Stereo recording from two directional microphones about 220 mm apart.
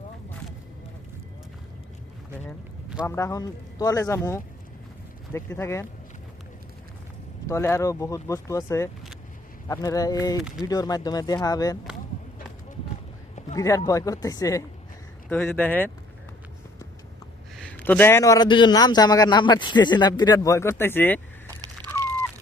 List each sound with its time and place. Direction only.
3.1 s a man's voice: 15° left (ahead or behind)
7.4 s a man's voice: 10° left (ahead or behind)
13.6 s a man's voice: 15° left (ahead or behind)
17.6 s a man's voice: 5° left (ahead or behind)
21.8 s a sound: 20° right (ahead or behind)